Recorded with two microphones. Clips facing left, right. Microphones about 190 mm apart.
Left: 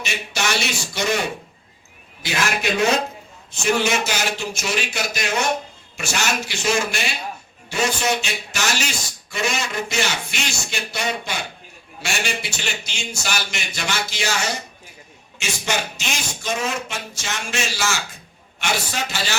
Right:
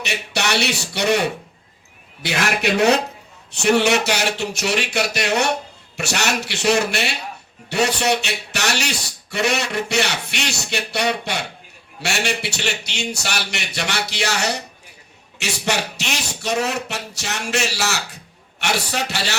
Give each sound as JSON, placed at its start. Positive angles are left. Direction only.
{"t": 0.0, "sound": "a man's voice", "side_deg": -65}
{"t": 2.2, "sound": "a man's voice", "side_deg": -65}